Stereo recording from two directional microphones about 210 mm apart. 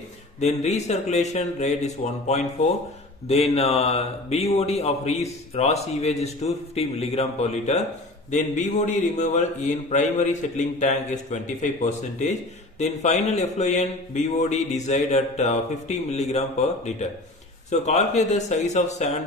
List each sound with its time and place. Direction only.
0.4 s a man's voice: 30° left (ahead or behind)